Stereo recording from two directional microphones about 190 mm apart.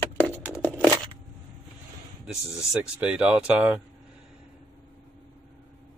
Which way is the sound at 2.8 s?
5° right (ahead or behind).